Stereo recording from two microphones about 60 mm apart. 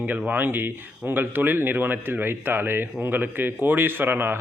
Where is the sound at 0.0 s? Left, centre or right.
Right.